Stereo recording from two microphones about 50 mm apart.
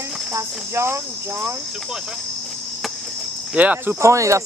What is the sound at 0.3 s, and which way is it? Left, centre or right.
Cricket, right.